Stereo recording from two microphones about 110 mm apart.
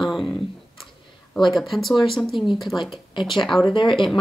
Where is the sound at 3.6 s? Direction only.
50° left (ahead or behind).